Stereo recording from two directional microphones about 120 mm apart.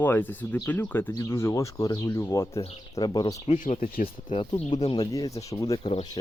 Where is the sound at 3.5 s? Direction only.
80° left.